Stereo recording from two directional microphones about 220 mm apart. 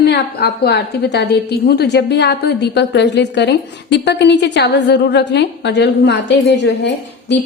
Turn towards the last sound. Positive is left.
turn(degrees=50)  # may be behind; listen again after turning